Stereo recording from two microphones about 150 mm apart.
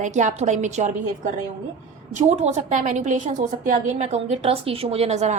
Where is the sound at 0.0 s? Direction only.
55° right (ahead or behind).